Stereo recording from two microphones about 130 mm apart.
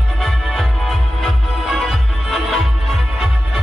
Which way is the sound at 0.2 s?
Centre (ahead or behind).